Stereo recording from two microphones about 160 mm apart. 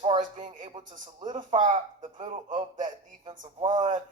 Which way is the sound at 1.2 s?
30° right (ahead or behind).